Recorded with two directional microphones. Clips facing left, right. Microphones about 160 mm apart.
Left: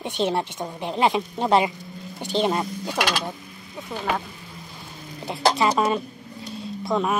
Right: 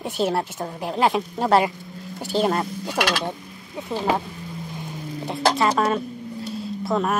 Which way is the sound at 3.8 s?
30° right (ahead or behind).